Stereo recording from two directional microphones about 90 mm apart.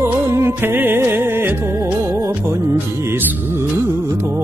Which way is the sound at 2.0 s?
40° right (ahead or behind).